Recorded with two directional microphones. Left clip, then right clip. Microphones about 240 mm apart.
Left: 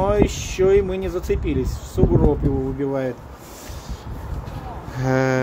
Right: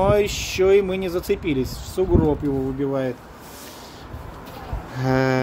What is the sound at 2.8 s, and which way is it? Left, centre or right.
Speech, centre.